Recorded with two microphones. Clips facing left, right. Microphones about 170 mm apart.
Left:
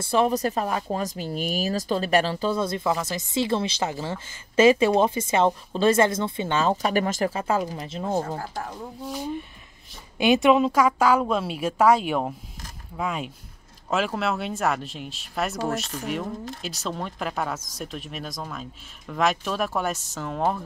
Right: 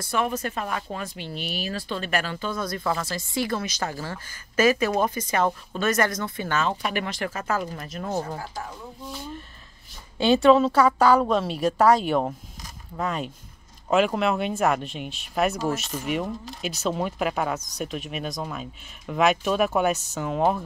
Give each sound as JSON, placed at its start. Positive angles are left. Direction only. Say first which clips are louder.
{"t": 0.0, "sound": "speech", "louder": "left 5 dB", "side_deg": 30}
{"t": 2.8, "sound": "a woman's voice", "louder": "left 2 dB", "side_deg": 15}
{"t": 6.7, "sound": "speech", "louder": "left 5 dB", "side_deg": 40}
{"t": 7.3, "sound": "a woman's voice", "louder": "left 3 dB", "side_deg": 30}
{"t": 7.6, "sound": "a woman's voice", "louder": "left 2 dB", "side_deg": 15}
{"t": 7.9, "sound": "a woman's voice", "louder": "left 3 dB", "side_deg": 25}
{"t": 10.1, "sound": "a woman's voice", "louder": "right 1 dB", "side_deg": 15}